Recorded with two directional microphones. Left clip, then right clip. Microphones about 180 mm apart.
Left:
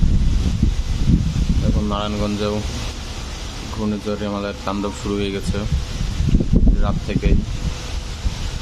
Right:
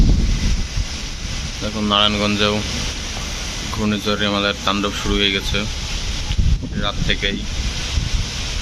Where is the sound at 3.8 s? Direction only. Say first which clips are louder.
Right 5 dB; centre (ahead or behind).